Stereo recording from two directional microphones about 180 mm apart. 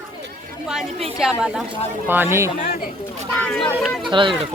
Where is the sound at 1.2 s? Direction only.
5° right (ahead or behind).